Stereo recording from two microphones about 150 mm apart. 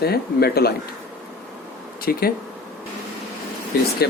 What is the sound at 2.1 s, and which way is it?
Speech, 90° left.